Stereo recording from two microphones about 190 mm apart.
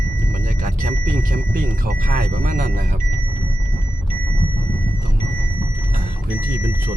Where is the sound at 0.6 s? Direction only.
40° right (ahead or behind).